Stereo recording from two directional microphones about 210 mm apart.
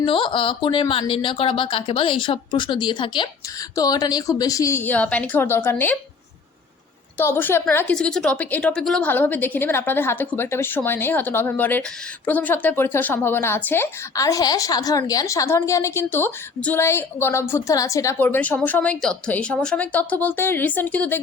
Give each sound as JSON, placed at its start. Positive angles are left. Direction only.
{"t": 0.0, "sound": "a woman's voice", "side_deg": 25}
{"t": 7.2, "sound": "a woman's voice", "side_deg": 10}